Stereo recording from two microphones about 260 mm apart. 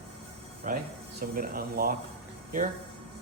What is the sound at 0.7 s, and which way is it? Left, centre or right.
Speech, right.